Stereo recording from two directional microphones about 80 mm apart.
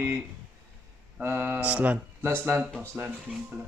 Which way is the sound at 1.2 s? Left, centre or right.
Right.